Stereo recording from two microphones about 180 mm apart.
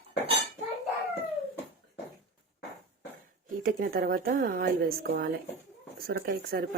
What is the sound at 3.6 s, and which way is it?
A woman's voice, 55° right (ahead or behind).